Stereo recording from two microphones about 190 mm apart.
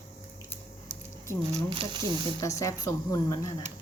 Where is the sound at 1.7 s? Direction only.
25° right (ahead or behind).